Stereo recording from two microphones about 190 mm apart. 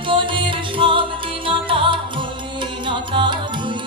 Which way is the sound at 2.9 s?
25° right (ahead or behind).